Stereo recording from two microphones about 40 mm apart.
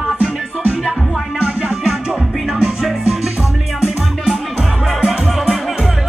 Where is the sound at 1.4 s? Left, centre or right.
Right.